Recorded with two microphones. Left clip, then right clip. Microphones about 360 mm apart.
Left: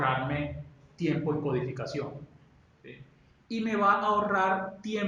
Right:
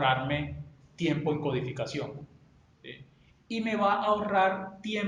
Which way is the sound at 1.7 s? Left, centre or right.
Right.